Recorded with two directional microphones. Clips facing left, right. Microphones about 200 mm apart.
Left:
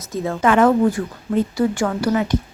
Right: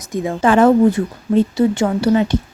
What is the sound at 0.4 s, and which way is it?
Speech, 30° right (ahead or behind).